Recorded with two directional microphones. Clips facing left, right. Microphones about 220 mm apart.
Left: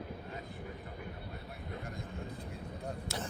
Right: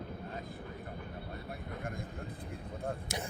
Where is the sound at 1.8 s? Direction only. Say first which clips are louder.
Right 2 dB; 50° right (ahead or behind).